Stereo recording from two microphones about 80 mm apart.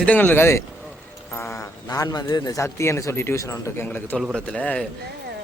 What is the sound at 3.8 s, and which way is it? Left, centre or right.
A man's voice, left.